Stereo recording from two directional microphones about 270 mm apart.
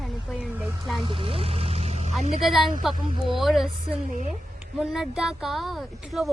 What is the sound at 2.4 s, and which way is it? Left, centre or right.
A woman's voice, centre.